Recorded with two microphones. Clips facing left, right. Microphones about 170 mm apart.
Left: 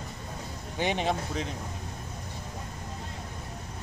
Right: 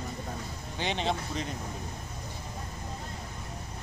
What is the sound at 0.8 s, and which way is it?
Speech, 10° left (ahead or behind).